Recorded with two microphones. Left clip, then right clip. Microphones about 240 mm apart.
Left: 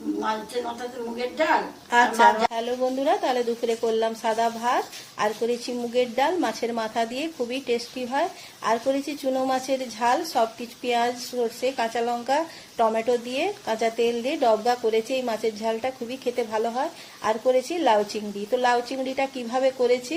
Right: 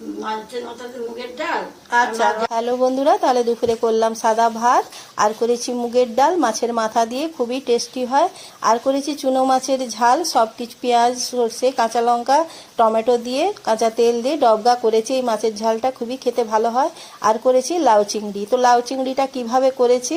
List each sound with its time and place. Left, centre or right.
1.9 s a woman's voice: centre
2.5 s speech: right